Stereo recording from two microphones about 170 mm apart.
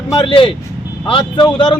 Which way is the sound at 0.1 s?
30° left (ahead or behind).